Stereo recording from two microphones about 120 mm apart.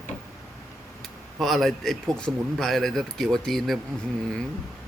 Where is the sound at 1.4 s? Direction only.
Centre (ahead or behind).